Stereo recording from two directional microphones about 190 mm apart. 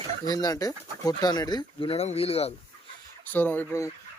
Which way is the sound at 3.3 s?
10° left (ahead or behind).